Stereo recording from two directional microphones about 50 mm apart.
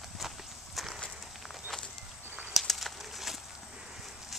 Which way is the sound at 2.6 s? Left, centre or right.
Centre.